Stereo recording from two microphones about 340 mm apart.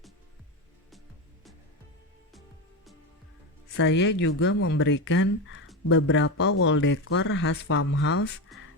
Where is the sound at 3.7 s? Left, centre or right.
Left.